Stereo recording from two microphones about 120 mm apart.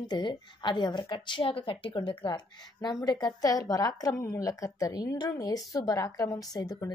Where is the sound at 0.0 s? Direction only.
40° left (ahead or behind).